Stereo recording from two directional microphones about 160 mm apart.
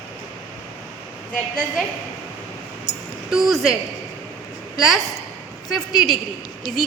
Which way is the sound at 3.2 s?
Centre (ahead or behind).